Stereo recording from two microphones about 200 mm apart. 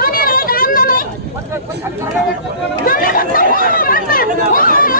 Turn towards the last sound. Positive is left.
turn(degrees=45)  # may be behind; listen again after turning